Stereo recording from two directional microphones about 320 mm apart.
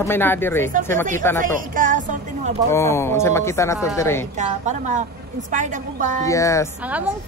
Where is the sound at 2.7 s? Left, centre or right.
Centre.